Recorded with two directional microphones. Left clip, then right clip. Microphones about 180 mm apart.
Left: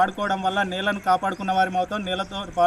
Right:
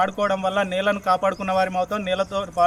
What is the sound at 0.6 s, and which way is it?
Speech, 50° right (ahead or behind).